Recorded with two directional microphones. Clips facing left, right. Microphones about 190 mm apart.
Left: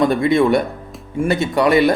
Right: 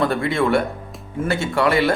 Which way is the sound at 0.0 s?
15° left (ahead or behind).